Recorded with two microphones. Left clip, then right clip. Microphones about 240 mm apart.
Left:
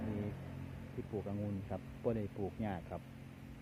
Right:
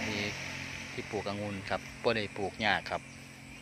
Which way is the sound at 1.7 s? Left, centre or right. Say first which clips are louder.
Right 10 dB; right.